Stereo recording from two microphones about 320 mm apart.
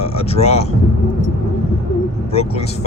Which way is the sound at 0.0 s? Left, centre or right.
Centre.